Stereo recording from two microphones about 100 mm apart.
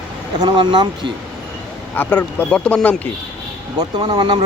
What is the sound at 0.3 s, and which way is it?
Speech, 50° right (ahead or behind).